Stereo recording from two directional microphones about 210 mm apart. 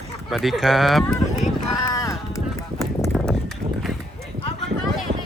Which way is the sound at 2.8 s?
15° left (ahead or behind).